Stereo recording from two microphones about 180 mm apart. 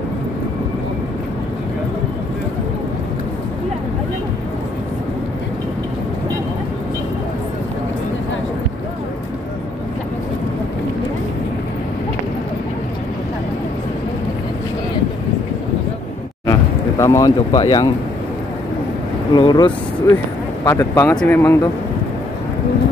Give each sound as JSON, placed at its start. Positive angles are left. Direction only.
{"t": 17.0, "sound": "speech", "side_deg": 20}
{"t": 19.3, "sound": "speech", "side_deg": 25}